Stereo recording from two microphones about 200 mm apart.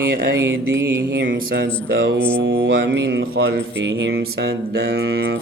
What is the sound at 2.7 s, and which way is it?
Speech, 60° right (ahead or behind).